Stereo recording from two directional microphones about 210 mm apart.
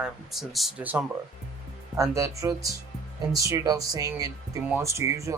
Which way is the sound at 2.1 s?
15° right (ahead or behind).